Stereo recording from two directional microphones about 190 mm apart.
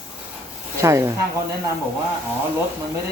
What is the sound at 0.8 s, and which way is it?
Speech, 15° right (ahead or behind).